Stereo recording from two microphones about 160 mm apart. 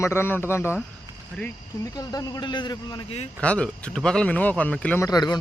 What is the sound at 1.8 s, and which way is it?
A man's voice, 20° left (ahead or behind).